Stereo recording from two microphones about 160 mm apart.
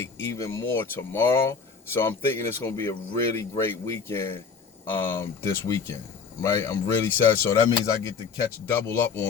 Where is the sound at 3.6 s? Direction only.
15° left (ahead or behind).